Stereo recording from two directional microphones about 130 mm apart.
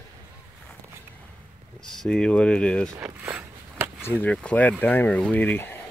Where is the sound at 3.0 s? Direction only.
10° right (ahead or behind).